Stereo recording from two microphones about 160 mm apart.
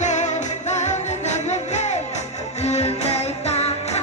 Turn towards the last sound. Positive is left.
turn(degrees=40)  # may be behind; listen again after turning